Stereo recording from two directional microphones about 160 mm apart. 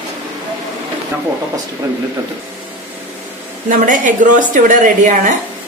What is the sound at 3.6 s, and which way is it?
A woman's voice, 55° right (ahead or behind).